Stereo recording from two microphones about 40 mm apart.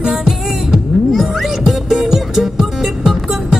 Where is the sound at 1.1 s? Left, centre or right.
Centre.